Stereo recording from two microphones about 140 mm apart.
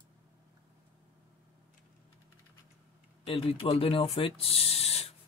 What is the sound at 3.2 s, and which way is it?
Speech, 45° left (ahead or behind).